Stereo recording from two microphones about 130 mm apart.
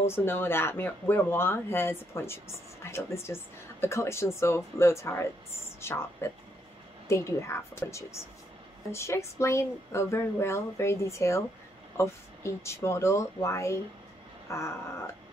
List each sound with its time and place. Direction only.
0.0 s speech: 20° left (ahead or behind)